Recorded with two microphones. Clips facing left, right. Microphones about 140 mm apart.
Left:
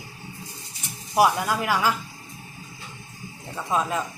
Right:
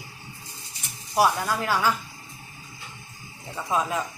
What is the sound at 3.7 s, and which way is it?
Speech, centre (ahead or behind).